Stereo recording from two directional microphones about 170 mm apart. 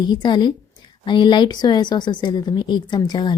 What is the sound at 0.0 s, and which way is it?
A woman's voice, 25° left (ahead or behind).